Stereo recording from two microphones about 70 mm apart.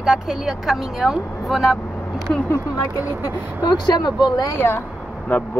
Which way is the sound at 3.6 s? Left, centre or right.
Left.